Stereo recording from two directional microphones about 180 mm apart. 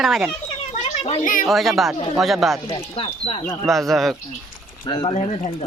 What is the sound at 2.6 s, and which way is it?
Speech, 30° left (ahead or behind).